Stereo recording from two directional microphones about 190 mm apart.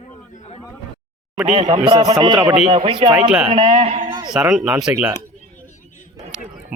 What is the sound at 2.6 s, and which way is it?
A man's voice, 30° right (ahead or behind).